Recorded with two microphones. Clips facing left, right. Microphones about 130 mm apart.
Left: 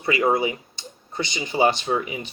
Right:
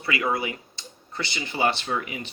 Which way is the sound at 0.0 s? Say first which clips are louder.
Left 6 dB; 30° left (ahead or behind).